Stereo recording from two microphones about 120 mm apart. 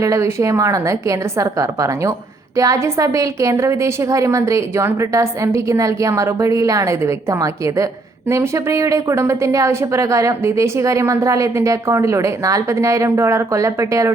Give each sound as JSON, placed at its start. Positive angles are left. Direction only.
{"t": 0.0, "sound": "a woman's voice", "side_deg": -25}